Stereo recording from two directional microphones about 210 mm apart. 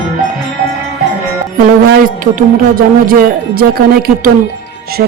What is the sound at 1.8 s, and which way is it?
Speech, 40° right (ahead or behind).